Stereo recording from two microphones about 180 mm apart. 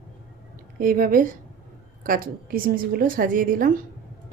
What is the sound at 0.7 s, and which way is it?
A woman's voice, 50° right (ahead or behind).